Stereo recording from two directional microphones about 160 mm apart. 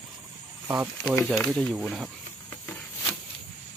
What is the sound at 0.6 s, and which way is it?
Speech, 10° right (ahead or behind).